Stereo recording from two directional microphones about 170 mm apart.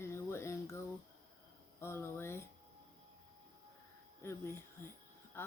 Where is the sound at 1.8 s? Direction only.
15° left (ahead or behind).